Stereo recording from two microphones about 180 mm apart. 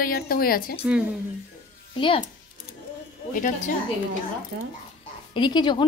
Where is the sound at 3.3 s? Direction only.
50° left (ahead or behind).